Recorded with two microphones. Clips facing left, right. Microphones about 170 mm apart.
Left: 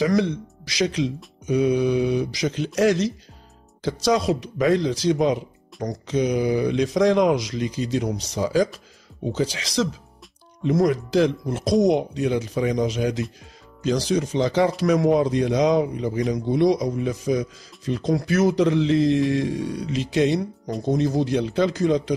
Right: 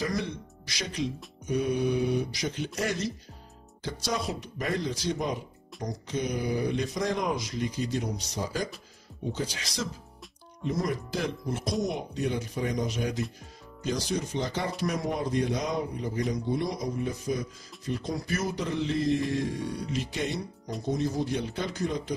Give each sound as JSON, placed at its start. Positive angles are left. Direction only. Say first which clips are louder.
{"t": 0.0, "sound": "speech", "louder": "left 10 dB", "side_deg": 90}